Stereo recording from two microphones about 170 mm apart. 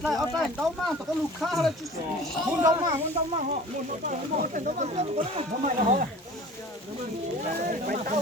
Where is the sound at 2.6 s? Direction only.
20° right (ahead or behind).